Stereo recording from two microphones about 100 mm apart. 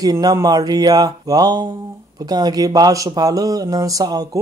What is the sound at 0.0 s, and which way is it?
Speech, 40° right (ahead or behind).